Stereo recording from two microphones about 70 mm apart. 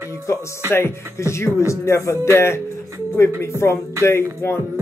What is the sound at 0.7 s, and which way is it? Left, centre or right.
Speech, left.